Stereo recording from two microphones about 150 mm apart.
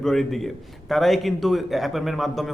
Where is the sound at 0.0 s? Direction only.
Centre (ahead or behind).